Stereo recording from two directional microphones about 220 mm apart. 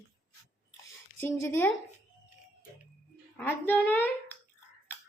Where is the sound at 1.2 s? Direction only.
10° left (ahead or behind).